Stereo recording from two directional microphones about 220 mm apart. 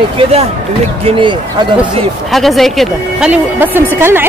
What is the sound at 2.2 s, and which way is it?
A woman's voice, centre (ahead or behind).